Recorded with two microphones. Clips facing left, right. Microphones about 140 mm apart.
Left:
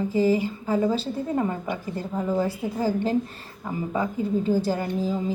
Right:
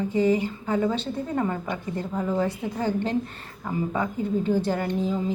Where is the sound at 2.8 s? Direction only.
35° left (ahead or behind).